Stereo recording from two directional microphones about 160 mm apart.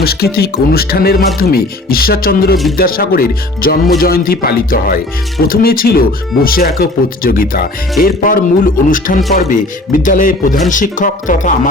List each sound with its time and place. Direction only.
0.0 s speech: 75° left (ahead or behind); by 11.7 s 55° left (ahead or behind)